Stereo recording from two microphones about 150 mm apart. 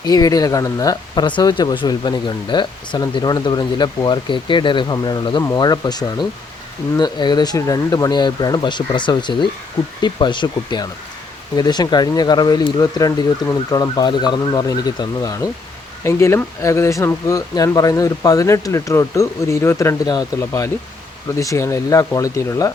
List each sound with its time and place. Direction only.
0.0 s speech: 25° left (ahead or behind)